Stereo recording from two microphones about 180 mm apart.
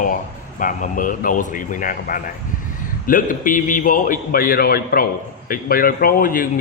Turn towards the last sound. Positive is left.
turn(degrees=50)  # may be behind; listen again after turning